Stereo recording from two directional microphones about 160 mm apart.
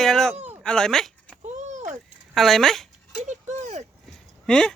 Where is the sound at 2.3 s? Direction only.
Centre (ahead or behind).